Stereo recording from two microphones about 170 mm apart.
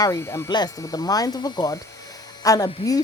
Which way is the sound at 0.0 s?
20° left (ahead or behind).